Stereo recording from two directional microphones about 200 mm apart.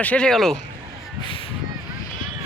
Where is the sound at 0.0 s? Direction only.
5° left (ahead or behind).